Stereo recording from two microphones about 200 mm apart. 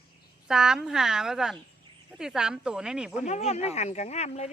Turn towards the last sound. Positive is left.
turn(degrees=35)  # may be behind; listen again after turning